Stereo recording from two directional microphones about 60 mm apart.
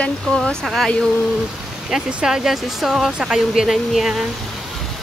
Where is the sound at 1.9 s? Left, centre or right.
Centre.